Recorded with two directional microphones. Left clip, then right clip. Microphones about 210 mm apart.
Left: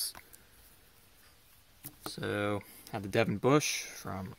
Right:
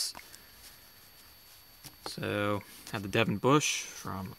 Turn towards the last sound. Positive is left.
turn(degrees=-15)  # may be behind; listen again after turning